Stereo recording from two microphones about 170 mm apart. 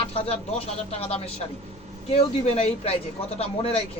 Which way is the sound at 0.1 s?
35° left (ahead or behind).